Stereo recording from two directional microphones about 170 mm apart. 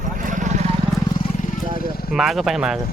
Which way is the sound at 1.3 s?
45° left (ahead or behind).